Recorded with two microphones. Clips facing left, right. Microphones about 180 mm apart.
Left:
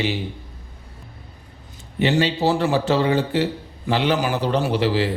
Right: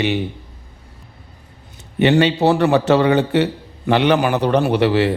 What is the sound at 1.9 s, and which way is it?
A man's voice, 65° right (ahead or behind).